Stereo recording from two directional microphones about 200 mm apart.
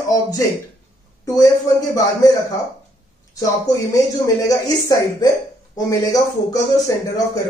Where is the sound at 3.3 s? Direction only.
15° left (ahead or behind).